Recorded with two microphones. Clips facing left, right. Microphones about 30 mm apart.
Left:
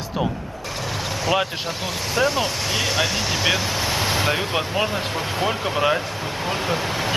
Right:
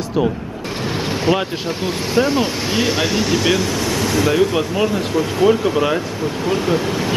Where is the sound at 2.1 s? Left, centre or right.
Centre.